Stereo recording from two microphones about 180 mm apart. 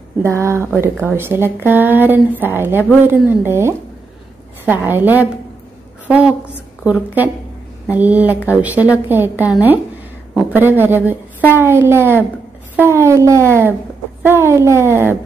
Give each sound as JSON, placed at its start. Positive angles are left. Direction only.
{"t": 0.2, "sound": "speech", "side_deg": -15}
{"t": 4.8, "sound": "a woman's voice", "side_deg": -10}